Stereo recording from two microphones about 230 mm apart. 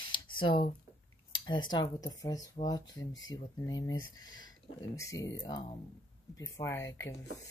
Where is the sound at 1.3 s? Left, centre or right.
Centre.